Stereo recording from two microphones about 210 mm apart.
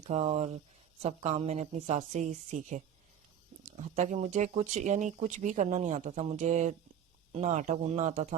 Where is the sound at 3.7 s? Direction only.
30° right (ahead or behind).